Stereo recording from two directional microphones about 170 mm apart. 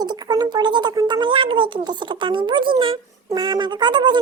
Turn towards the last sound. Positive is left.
turn(degrees=-25)  # may be behind; listen again after turning